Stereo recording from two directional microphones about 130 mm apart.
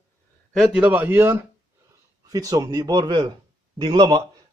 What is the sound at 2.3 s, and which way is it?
A man's voice, 25° right (ahead or behind).